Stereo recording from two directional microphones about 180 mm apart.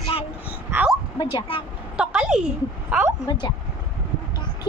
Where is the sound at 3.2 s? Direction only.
25° left (ahead or behind).